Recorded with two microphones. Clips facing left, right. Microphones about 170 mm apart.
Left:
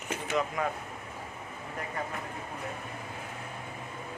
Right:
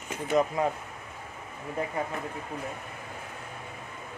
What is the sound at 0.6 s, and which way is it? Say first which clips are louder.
Speech: right 4 dB; 30° right (ahead or behind).